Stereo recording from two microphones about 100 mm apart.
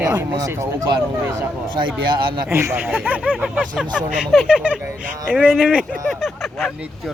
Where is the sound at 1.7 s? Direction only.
50° right (ahead or behind).